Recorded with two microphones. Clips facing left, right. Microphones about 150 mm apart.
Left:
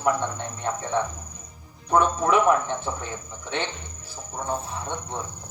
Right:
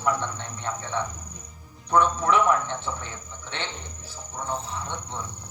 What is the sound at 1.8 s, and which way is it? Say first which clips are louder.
Speech: left 1 dB; 50° left (ahead or behind).